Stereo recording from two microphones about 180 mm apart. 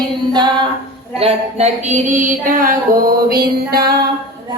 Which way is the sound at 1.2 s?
35° right (ahead or behind).